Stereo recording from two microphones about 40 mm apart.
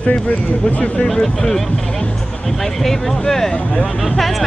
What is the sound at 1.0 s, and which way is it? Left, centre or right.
Speech, centre.